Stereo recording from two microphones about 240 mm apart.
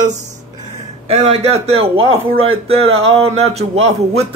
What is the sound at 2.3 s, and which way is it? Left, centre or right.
Speech, right.